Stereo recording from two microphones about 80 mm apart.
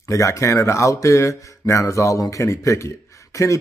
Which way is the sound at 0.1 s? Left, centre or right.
Left.